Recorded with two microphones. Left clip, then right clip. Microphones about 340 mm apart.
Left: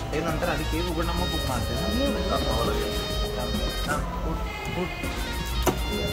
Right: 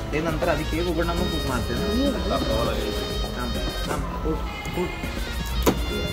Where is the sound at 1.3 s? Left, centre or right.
Left.